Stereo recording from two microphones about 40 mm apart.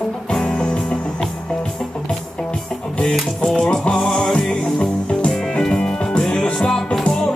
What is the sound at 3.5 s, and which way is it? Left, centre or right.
Music, left.